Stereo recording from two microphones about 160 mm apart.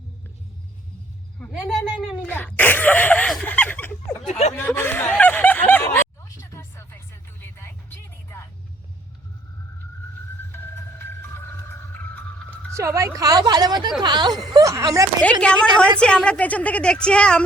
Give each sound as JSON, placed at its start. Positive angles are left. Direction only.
{"t": 1.5, "sound": "a sound", "side_deg": 5}
{"t": 4.3, "sound": "speech", "side_deg": 45}
{"t": 4.5, "sound": "speech", "side_deg": 15}
{"t": 10.5, "sound": "music", "side_deg": 15}
{"t": 12.7, "sound": "speech", "side_deg": -20}
{"t": 15.2, "sound": "a woman's voice", "side_deg": 5}